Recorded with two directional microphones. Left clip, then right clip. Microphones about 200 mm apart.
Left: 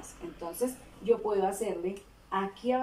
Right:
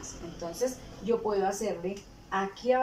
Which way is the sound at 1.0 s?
10° left (ahead or behind).